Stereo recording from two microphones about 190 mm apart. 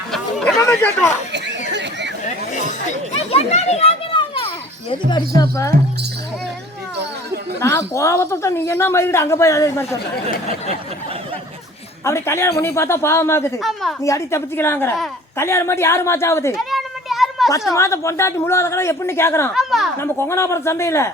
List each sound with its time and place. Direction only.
0.1 s a sound: centre (ahead or behind)
0.6 s speech: 10° left (ahead or behind)
1.7 s chatter: 65° right (ahead or behind)
2.2 s chatter: 40° left (ahead or behind)
3.3 s a child's voice: 35° left (ahead or behind)
5.4 s speech: 15° left (ahead or behind)
7.6 s speech: 15° left (ahead or behind)
12.0 s speech: 15° left (ahead or behind)
13.6 s a woman's voice: centre (ahead or behind)
14.0 s speech: 15° left (ahead or behind)
16.6 s children playing: centre (ahead or behind)
17.7 s speech: 15° left (ahead or behind)
19.5 s a woman's voice: centre (ahead or behind)
20.0 s speech: 15° left (ahead or behind)